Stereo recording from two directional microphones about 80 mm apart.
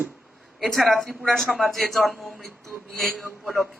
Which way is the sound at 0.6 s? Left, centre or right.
Centre.